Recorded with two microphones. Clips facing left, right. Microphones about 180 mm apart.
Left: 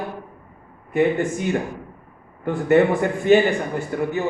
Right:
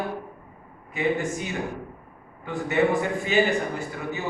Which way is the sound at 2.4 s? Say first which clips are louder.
Left 7 dB; 55° left (ahead or behind).